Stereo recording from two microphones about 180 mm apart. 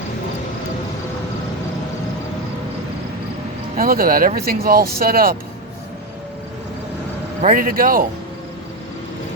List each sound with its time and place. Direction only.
3.8 s speech: 55° right (ahead or behind)
7.4 s speech: 50° right (ahead or behind)